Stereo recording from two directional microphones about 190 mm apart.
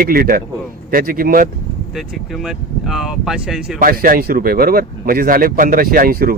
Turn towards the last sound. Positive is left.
turn(degrees=-50)  # may be behind; listen again after turning